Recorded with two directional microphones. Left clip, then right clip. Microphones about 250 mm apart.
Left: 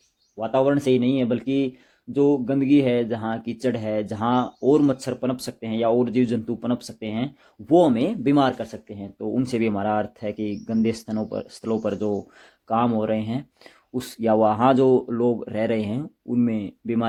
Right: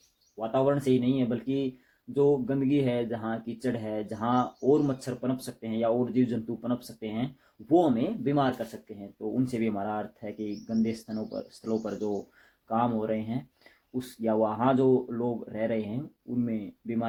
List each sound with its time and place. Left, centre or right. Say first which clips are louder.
0.3 s speech: left 6 dB; left